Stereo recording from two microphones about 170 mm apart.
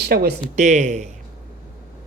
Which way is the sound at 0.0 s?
70° right (ahead or behind).